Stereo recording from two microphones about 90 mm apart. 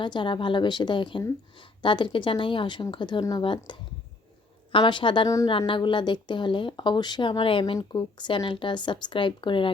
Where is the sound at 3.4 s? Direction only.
70° left (ahead or behind).